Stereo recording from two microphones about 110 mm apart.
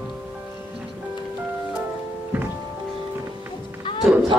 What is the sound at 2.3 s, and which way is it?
Music, 15° right (ahead or behind).